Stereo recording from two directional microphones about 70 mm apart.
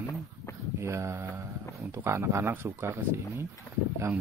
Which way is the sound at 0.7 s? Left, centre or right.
Right.